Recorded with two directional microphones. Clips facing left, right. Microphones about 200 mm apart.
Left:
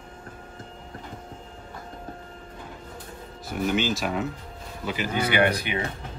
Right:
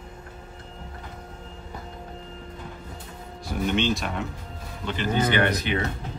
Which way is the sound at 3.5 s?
5° left (ahead or behind).